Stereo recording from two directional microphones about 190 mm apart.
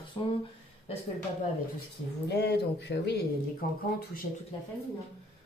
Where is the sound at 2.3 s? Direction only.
60° left (ahead or behind).